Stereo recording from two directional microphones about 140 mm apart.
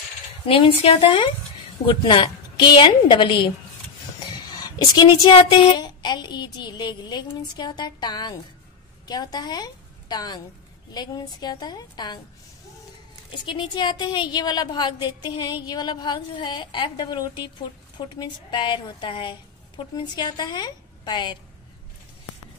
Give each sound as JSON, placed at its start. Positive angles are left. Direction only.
{"t": 0.5, "sound": "a woman's voice", "side_deg": 40}
{"t": 4.6, "sound": "a woman's voice", "side_deg": 25}
{"t": 13.3, "sound": "a woman's voice", "side_deg": 35}